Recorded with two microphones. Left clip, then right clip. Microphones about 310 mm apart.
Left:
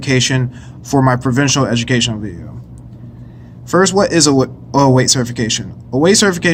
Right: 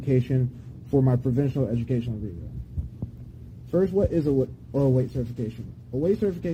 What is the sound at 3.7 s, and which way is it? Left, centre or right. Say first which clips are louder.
Speech: left 11 dB; left.